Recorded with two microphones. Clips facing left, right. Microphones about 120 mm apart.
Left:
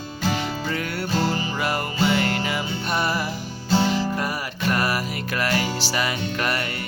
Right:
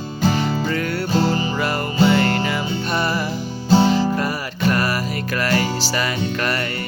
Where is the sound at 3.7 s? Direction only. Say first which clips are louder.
Right 6 dB; 25° right (ahead or behind).